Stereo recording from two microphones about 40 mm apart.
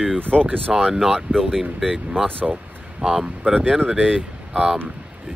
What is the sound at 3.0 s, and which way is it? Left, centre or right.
Speech, centre.